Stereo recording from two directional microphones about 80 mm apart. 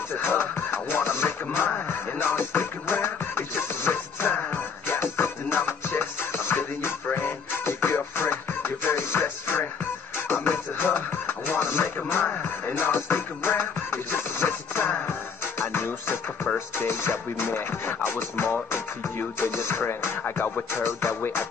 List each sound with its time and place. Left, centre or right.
0.2 s music: left